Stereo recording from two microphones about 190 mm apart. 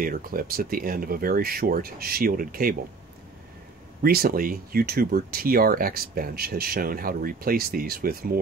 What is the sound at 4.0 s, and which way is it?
Speech, 50° right (ahead or behind).